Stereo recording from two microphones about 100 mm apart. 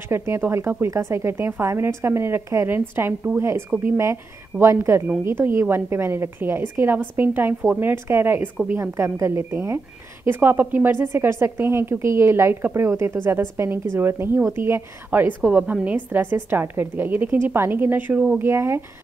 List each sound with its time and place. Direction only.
0.1 s speech: 25° right (ahead or behind)